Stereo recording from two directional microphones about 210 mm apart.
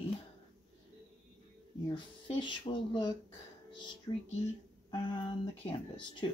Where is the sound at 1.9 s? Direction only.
20° left (ahead or behind).